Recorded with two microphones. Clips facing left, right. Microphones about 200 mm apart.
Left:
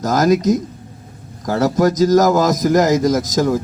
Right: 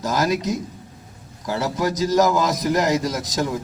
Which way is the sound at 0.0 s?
45° left (ahead or behind).